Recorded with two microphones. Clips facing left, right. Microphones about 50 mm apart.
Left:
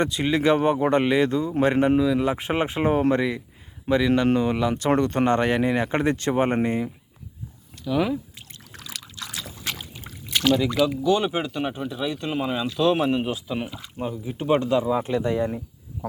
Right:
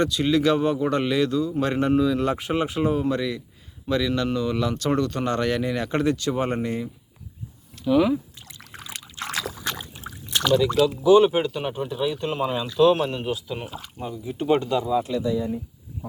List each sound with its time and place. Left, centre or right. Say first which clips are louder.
0.0 s speech: right 1 dB; left
2.0 s speech: even; centre
2.4 s speech: even; left
4.9 s speech: left 5 dB; left
7.9 s speech: right 4 dB; centre
8.7 s trickle: right 1 dB; right
10.5 s speech: right 2 dB; centre
11.0 s speech: right 6 dB; centre
13.6 s speech: left 3 dB; centre
14.3 s speech: right 1 dB; centre
14.8 s speech: even; left
15.3 s speech: left 1 dB; left